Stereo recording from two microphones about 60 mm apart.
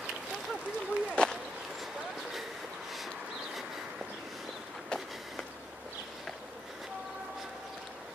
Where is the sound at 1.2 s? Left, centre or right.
Centre.